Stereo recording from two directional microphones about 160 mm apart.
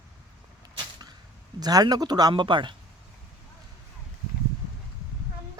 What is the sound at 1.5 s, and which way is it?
A man's voice, 25° right (ahead or behind).